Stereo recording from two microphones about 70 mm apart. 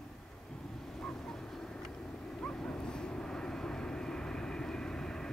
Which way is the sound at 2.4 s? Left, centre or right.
Centre.